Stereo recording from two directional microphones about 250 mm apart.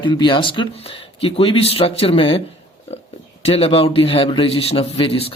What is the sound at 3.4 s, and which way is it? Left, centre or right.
Speech, left.